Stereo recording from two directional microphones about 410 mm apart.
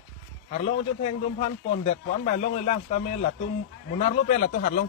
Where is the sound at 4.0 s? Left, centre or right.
Centre.